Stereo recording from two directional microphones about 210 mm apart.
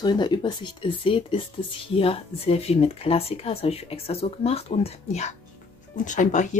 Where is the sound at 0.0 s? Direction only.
20° left (ahead or behind).